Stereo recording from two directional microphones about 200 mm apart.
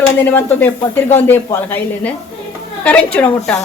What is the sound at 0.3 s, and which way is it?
Speech, 10° left (ahead or behind).